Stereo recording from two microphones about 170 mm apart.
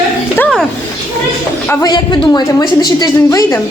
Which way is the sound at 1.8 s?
25° left (ahead or behind).